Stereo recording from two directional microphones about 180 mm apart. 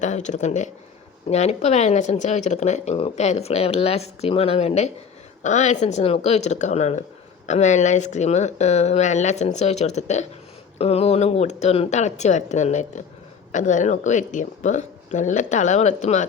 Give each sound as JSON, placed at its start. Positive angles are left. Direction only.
{"t": 0.0, "sound": "speech", "side_deg": 40}